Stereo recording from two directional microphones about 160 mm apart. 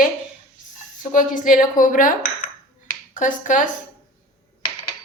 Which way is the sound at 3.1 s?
50° left (ahead or behind).